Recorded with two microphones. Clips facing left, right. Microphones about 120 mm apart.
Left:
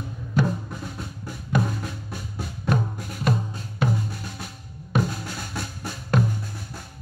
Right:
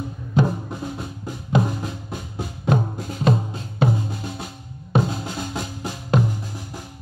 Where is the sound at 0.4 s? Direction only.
25° right (ahead or behind).